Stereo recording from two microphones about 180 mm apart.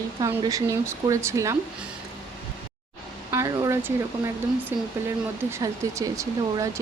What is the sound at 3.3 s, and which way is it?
Speech, 15° right (ahead or behind).